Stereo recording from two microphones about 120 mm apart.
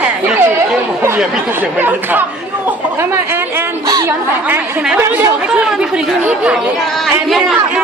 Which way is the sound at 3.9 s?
30° right (ahead or behind).